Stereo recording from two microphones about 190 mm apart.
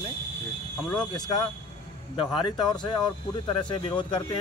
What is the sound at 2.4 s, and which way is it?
Speech, 25° left (ahead or behind).